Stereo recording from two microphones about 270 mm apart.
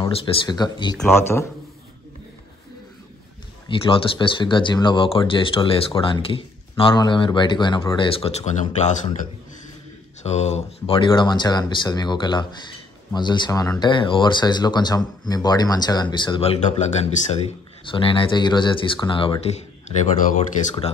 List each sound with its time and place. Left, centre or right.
0.0 s speech: centre
3.6 s speech: centre
10.2 s speech: left